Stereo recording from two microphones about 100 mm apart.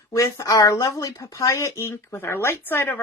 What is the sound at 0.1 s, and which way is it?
A woman's voice, 30° left (ahead or behind).